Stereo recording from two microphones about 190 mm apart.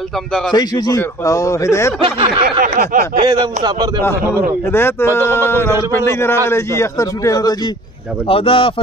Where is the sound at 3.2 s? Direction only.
20° right (ahead or behind).